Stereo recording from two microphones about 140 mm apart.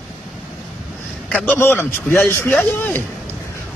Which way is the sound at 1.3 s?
10° left (ahead or behind).